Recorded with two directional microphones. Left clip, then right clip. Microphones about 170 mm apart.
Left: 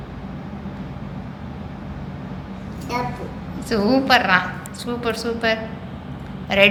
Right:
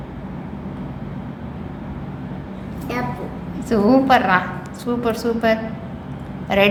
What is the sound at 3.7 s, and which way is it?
A woman's voice, 15° right (ahead or behind).